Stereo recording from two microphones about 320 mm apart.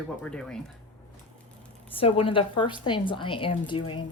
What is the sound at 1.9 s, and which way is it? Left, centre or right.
Speech, centre.